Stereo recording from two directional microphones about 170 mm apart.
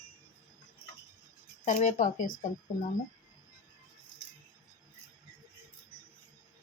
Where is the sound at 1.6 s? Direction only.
45° left (ahead or behind).